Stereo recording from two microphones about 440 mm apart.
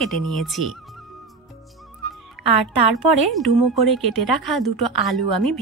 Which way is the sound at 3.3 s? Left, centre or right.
Centre.